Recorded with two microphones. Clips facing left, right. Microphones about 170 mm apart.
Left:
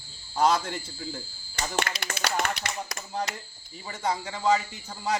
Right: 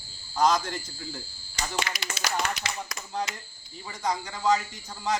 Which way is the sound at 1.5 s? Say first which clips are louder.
Left 2 dB; 50° left (ahead or behind).